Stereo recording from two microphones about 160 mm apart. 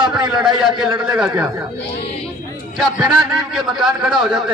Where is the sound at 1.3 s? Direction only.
20° right (ahead or behind).